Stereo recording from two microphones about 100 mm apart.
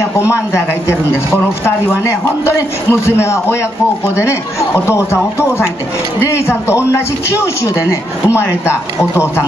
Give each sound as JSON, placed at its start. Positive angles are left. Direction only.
{"t": 0.2, "sound": "a man's voice", "side_deg": 25}
{"t": 2.0, "sound": "a man's voice", "side_deg": 25}